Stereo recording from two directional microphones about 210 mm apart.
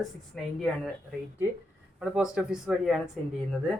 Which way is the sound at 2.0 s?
5° right (ahead or behind).